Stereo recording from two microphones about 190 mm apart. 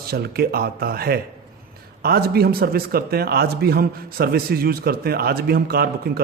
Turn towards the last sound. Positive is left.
turn(degrees=-55)  # may be behind; listen again after turning